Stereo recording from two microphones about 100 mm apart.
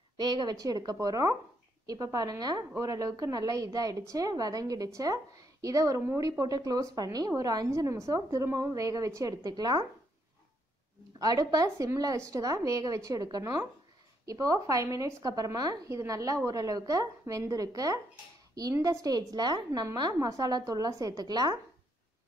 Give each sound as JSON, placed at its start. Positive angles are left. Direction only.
{"t": 0.2, "sound": "a woman's voice", "side_deg": -50}
{"t": 11.1, "sound": "a woman's voice", "side_deg": -40}
{"t": 20.2, "sound": "a woman's voice", "side_deg": -35}